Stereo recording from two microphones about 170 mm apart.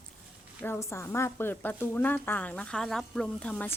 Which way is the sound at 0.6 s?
15° left (ahead or behind).